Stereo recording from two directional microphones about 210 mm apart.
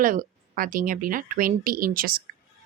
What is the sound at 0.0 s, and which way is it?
Speech, 40° right (ahead or behind).